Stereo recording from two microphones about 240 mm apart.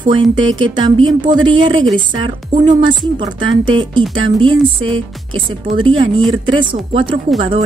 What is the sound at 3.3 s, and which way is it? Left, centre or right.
Speech, right.